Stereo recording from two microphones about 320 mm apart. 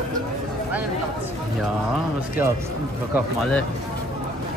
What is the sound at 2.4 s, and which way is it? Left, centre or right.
Speech, centre.